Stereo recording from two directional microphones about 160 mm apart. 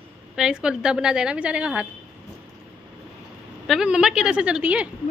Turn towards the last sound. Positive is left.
turn(degrees=-5)  # may be behind; listen again after turning